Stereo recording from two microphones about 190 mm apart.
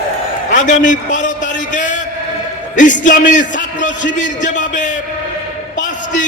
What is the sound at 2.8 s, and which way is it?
A man's voice, 40° left (ahead or behind).